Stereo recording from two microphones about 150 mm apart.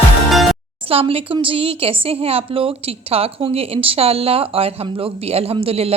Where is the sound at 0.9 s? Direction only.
40° right (ahead or behind).